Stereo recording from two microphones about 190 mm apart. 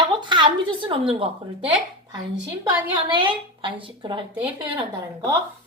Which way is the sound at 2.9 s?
25° right (ahead or behind).